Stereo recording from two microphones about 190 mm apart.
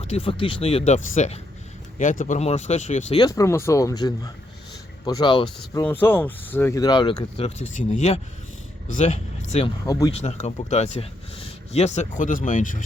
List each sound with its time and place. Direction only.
0.0 s speech: 30° left (ahead or behind)
3.2 s speech: 20° left (ahead or behind)
5.8 s speech: 10° left (ahead or behind); by 9.7 s 35° left (ahead or behind)
9.8 s speech: 15° left (ahead or behind)
10.1 s speech: 35° left (ahead or behind)